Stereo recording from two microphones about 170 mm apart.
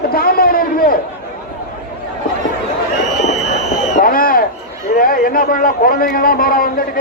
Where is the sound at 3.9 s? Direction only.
55° left (ahead or behind).